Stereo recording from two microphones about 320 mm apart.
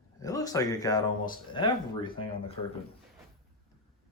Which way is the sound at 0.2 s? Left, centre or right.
Centre.